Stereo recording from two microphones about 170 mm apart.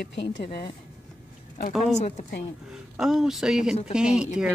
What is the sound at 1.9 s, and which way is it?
Speech, 40° left (ahead or behind).